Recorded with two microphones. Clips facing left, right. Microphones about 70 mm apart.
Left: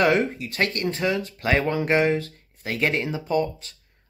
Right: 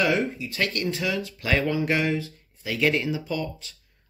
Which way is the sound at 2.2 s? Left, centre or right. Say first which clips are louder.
Left 1 dB; left.